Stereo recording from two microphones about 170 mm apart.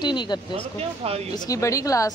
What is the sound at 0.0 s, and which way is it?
Speech, 25° left (ahead or behind).